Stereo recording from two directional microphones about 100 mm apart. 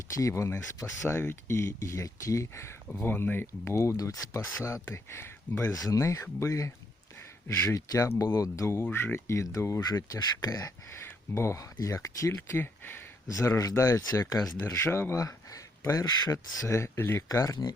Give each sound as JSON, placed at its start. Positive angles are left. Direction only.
{"t": 0.2, "sound": "speech", "side_deg": 30}
{"t": 2.9, "sound": "speech", "side_deg": 20}
{"t": 5.7, "sound": "speech", "side_deg": 35}
{"t": 14.7, "sound": "speech", "side_deg": 25}
{"t": 17.2, "sound": "speech", "side_deg": 35}